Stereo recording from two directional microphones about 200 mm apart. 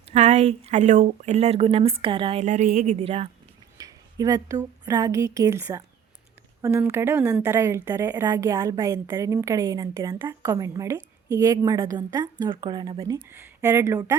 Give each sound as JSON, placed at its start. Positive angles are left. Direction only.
{"t": 0.1, "sound": "speech", "side_deg": -35}
{"t": 3.8, "sound": "a woman's voice", "side_deg": -20}
{"t": 13.2, "sound": "a woman's voice", "side_deg": -10}